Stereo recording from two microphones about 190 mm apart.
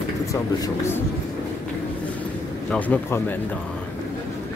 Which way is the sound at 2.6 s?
10° left (ahead or behind).